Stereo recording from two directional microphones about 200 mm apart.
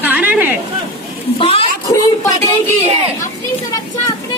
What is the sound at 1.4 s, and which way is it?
Speech, 30° left (ahead or behind).